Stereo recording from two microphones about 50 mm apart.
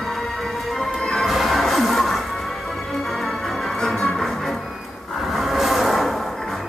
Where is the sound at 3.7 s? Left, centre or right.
Centre.